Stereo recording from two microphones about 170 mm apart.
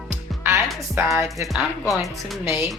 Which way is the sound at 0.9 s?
15° right (ahead or behind).